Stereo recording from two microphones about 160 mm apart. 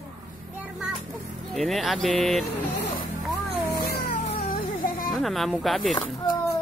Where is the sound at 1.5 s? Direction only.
Centre (ahead or behind).